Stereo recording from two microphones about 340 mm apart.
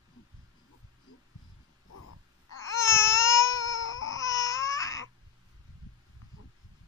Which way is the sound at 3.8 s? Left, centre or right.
Left.